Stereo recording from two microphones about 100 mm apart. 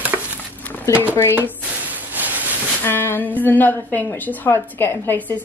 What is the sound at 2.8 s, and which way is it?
A woman's voice, 20° left (ahead or behind).